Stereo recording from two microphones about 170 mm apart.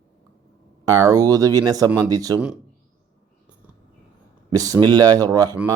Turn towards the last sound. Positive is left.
turn(degrees=-20)  # may be behind; listen again after turning